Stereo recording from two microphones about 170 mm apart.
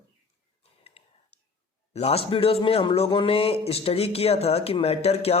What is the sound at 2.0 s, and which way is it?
A man's voice, 35° left (ahead or behind).